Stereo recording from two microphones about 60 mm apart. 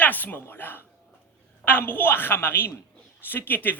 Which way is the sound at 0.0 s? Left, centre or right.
Left.